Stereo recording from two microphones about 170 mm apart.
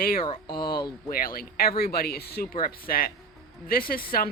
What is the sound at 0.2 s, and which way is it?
Speech, 30° left (ahead or behind).